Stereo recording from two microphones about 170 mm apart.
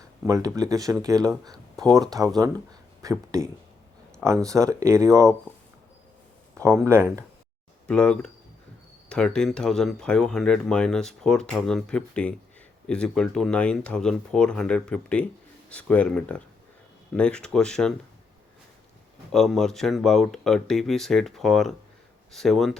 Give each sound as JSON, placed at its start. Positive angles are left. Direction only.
{"t": 0.3, "sound": "speech", "side_deg": -20}
{"t": 6.5, "sound": "a sound", "side_deg": -15}
{"t": 6.8, "sound": "speech", "side_deg": -15}
{"t": 7.9, "sound": "speech", "side_deg": 5}
{"t": 19.3, "sound": "speech", "side_deg": 0}